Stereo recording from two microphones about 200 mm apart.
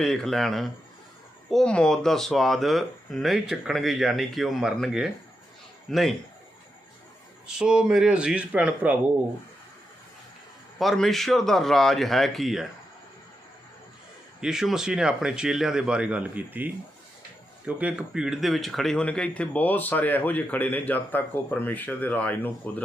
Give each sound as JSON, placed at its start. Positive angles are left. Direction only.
{"t": 0.0, "sound": "speech", "side_deg": 0}
{"t": 7.4, "sound": "speech", "side_deg": -5}
{"t": 10.8, "sound": "speech", "side_deg": 0}
{"t": 14.4, "sound": "speech", "side_deg": -5}
{"t": 17.7, "sound": "speech", "side_deg": -5}